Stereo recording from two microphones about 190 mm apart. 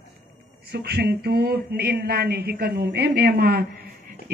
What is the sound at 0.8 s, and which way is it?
A woman's voice, 55° right (ahead or behind).